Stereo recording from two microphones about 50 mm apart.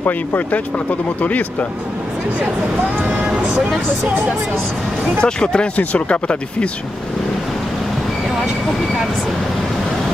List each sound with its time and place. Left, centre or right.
1.2 s speech: left
5.2 s speech: centre
5.8 s speech: left